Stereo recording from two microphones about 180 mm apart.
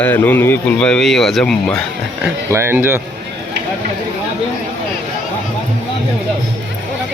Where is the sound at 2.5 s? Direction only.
15° right (ahead or behind).